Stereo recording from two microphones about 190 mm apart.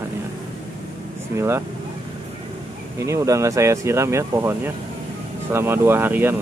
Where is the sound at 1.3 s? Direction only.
15° right (ahead or behind).